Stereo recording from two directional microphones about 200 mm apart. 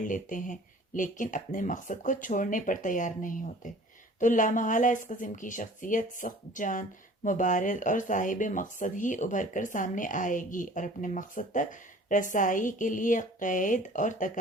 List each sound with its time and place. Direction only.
0.0 s speech: 40° left (ahead or behind)